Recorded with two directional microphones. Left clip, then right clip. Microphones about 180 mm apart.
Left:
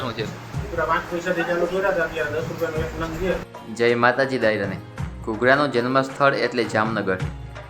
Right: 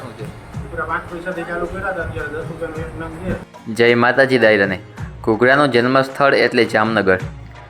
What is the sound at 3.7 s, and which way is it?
Speech, 30° right (ahead or behind).